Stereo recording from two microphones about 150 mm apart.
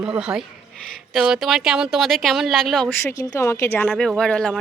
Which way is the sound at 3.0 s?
25° left (ahead or behind).